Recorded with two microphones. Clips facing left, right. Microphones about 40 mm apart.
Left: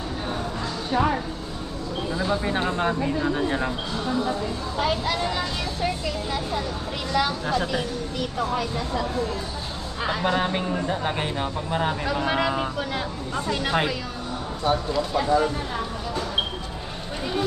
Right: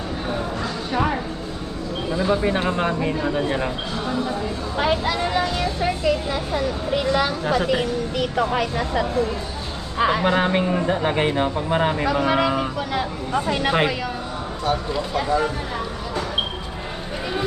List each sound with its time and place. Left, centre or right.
2.0 s speech: centre
4.8 s speech: right
10.0 s speech: right
12.3 s speech: centre
13.3 s speech: right